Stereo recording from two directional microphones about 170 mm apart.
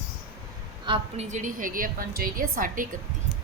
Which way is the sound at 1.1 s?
45° right (ahead or behind).